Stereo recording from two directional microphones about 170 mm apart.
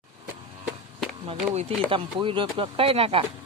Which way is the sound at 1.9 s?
30° right (ahead or behind).